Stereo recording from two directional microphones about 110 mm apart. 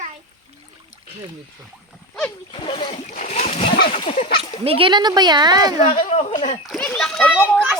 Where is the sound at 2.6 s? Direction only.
55° left (ahead or behind).